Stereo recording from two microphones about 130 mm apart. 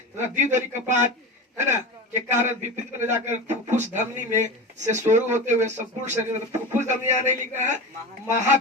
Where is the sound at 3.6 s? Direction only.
65° right (ahead or behind).